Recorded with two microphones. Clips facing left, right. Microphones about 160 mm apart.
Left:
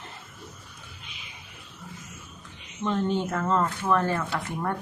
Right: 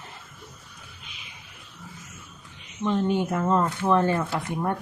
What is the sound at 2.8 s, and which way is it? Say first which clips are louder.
Speech: right 2 dB; 10° right (ahead or behind).